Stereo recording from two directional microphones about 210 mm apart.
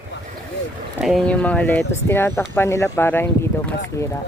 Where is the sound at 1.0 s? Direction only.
Centre (ahead or behind).